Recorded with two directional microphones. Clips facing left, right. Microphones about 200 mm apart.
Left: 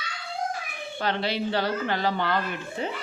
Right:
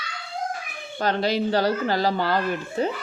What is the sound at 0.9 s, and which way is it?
Speech, 40° right (ahead or behind).